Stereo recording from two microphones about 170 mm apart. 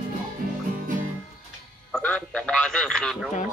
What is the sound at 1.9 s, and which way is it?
A man's voice, 5° left (ahead or behind).